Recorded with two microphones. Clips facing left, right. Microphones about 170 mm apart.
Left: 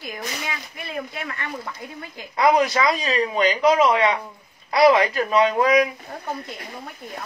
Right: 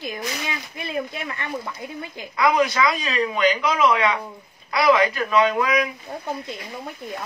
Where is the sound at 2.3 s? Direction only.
35° left (ahead or behind).